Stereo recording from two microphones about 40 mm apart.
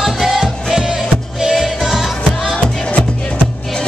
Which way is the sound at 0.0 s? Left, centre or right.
Centre.